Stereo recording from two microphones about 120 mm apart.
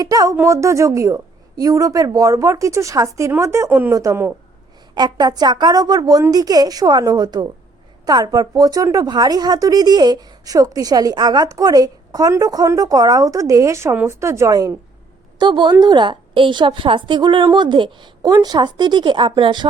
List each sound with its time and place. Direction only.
0.0 s a woman's voice: 30° right (ahead or behind); by 3.9 s 15° right (ahead or behind)
3.9 s a woman's voice: 25° right (ahead or behind)
4.9 s speech: 35° right (ahead or behind)
15.4 s speech: 40° right (ahead or behind)